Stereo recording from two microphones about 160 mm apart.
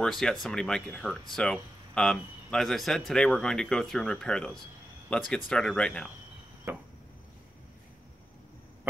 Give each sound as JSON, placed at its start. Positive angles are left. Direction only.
{"t": 0.0, "sound": "speech", "side_deg": 5}
{"t": 6.7, "sound": "chop", "side_deg": -15}